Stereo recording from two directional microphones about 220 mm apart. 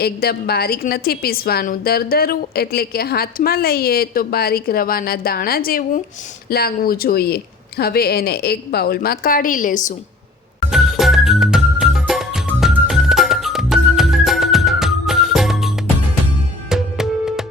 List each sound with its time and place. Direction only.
0.0 s a woman's voice: 45° left (ahead or behind)
10.7 s music: centre (ahead or behind)